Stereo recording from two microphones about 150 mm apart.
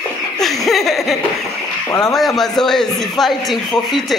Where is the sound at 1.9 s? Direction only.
25° left (ahead or behind).